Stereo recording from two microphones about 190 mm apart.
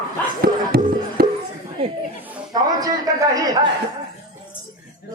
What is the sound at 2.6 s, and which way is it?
Speech, 20° right (ahead or behind).